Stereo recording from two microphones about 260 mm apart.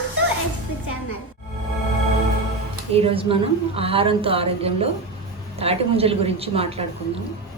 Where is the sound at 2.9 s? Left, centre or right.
Right.